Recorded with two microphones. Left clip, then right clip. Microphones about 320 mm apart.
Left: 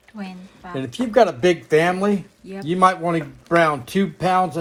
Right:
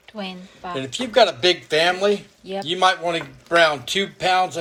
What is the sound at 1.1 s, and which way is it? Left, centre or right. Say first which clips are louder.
Speech: even; centre.